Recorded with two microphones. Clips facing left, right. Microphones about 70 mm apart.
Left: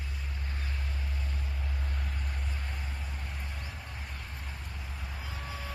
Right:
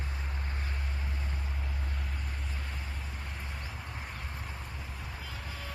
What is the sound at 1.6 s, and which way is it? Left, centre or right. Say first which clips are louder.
Vehicle: even; centre.